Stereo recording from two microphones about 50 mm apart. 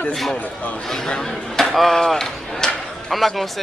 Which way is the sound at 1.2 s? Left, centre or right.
Centre.